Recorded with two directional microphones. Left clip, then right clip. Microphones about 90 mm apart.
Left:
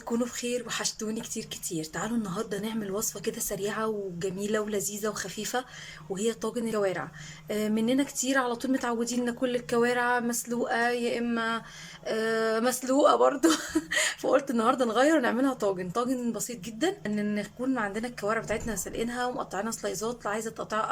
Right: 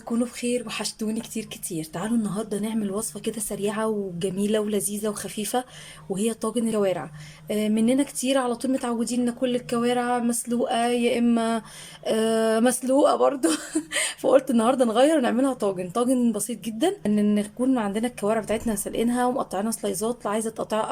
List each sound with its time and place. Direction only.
0.4 s speech: 20° right (ahead or behind)
11.2 s speech: 40° right (ahead or behind)
13.1 s speech: 10° right (ahead or behind)
16.3 s speech: 35° right (ahead or behind)